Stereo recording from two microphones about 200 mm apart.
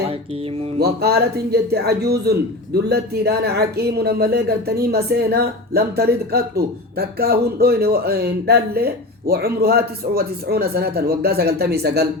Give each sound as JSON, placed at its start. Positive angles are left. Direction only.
{"t": 0.0, "sound": "music", "side_deg": -30}
{"t": 0.8, "sound": "speech", "side_deg": -55}